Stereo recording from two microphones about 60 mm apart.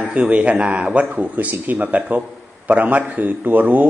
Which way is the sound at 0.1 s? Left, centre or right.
Right.